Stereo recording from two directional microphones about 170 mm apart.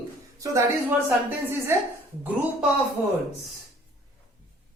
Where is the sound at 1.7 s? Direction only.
15° right (ahead or behind).